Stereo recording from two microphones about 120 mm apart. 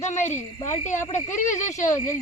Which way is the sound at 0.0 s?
80° left.